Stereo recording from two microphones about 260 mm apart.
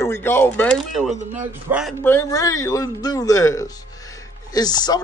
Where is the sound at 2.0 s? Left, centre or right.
Centre.